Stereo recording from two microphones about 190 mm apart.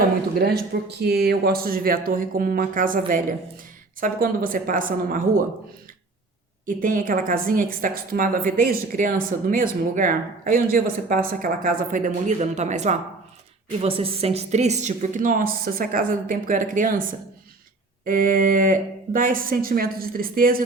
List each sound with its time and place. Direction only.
0.3 s a woman's voice: 55° right (ahead or behind)
4.0 s a woman's voice: 45° right (ahead or behind)
6.7 s a woman's voice: 45° right (ahead or behind)